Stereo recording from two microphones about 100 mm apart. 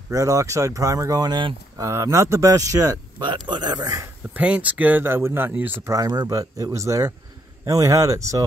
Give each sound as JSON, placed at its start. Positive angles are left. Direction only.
{"t": 0.1, "sound": "speech", "side_deg": -35}
{"t": 1.8, "sound": "speech", "side_deg": -30}
{"t": 3.2, "sound": "speech", "side_deg": -50}
{"t": 4.3, "sound": "speech", "side_deg": -15}
{"t": 5.9, "sound": "speech", "side_deg": -35}